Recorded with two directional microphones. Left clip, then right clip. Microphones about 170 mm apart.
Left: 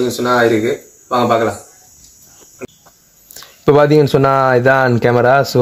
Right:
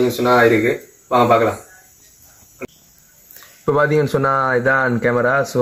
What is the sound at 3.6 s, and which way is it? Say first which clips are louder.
Speech: left 6 dB; 55° left (ahead or behind).